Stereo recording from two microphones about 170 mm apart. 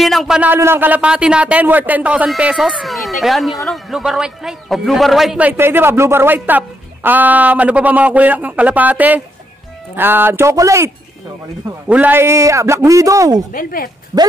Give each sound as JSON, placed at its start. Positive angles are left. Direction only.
{"t": 0.0, "sound": "a man's voice", "side_deg": 0}
{"t": 11.9, "sound": "a man's voice", "side_deg": -10}
{"t": 13.5, "sound": "speech", "side_deg": 55}